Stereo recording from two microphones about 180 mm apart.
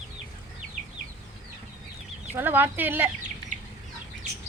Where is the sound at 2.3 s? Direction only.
10° right (ahead or behind).